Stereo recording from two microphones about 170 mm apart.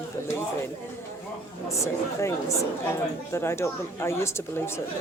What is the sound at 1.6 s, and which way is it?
A woman's voice, 15° left (ahead or behind).